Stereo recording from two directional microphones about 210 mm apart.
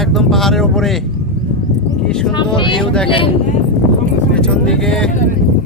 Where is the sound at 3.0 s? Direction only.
25° left (ahead or behind).